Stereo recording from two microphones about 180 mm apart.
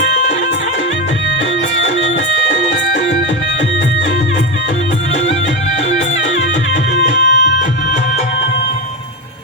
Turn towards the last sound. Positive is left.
turn(degrees=85)